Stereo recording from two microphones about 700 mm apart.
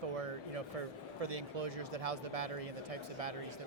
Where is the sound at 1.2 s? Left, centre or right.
Right.